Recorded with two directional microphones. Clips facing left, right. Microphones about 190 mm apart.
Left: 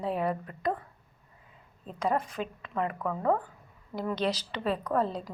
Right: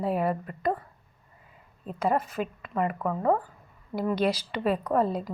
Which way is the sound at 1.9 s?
5° right (ahead or behind).